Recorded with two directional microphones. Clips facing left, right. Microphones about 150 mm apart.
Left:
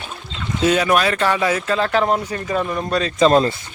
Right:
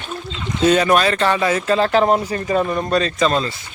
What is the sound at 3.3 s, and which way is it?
Speech, 45° left (ahead or behind).